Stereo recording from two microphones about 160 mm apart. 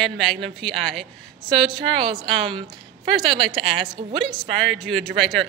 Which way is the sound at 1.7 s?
30° right (ahead or behind).